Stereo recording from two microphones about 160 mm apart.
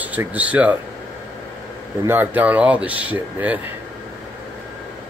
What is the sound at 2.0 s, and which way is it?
Speech, 10° right (ahead or behind).